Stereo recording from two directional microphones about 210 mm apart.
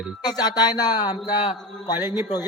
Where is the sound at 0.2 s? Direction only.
20° left (ahead or behind).